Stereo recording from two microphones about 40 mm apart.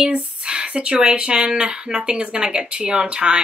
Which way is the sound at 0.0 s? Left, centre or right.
Right.